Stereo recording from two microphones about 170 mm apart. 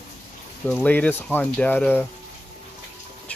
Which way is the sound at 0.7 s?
10° left (ahead or behind).